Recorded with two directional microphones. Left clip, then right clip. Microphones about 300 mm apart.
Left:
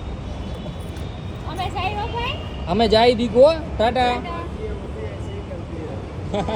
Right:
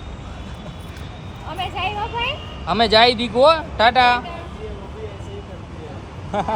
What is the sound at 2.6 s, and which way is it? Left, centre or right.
Speech, centre.